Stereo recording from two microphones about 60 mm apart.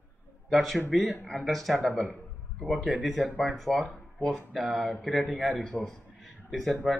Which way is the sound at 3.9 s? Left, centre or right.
Centre.